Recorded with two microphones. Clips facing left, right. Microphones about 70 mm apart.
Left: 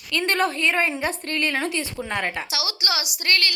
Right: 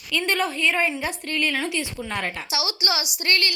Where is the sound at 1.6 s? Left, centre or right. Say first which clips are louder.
Left 1 dB; left.